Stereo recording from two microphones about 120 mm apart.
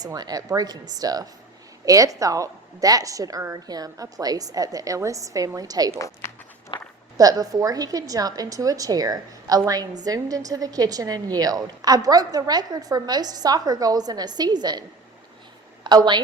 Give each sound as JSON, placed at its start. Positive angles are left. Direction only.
{"t": 0.0, "sound": "a woman's voice", "side_deg": -35}
{"t": 6.2, "sound": "run", "side_deg": 20}
{"t": 6.7, "sound": "walk", "side_deg": 45}
{"t": 7.2, "sound": "a woman's voice", "side_deg": -30}